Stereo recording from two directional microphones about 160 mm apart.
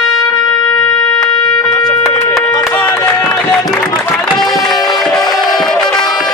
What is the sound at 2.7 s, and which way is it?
Run, 15° left (ahead or behind).